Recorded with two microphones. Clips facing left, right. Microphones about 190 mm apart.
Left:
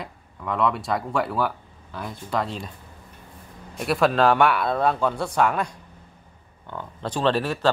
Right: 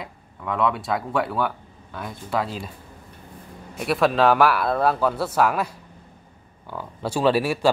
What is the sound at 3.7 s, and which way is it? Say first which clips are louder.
Speech: even; centre (ahead or behind).